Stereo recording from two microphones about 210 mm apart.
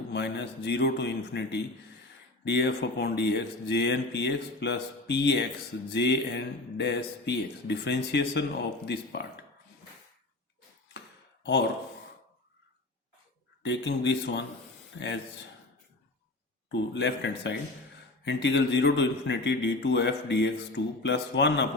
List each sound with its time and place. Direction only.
0.1 s a man's voice: 55° left (ahead or behind)
13.6 s a man's voice: 55° left (ahead or behind)
16.7 s a man's voice: 55° left (ahead or behind)